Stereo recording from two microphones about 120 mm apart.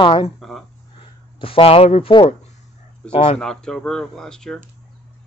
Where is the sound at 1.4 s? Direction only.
50° left (ahead or behind).